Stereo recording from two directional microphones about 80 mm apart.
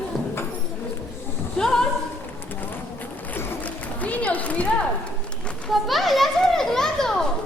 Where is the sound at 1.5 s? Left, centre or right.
Centre.